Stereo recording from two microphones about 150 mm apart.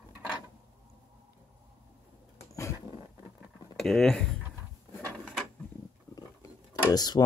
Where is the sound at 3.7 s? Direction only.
5° left (ahead or behind).